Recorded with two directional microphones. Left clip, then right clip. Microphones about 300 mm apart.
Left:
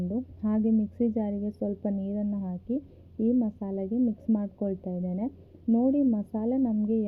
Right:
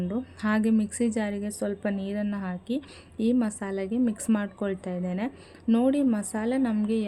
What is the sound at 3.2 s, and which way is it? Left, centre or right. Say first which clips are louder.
A woman's voice: right 1 dB; centre.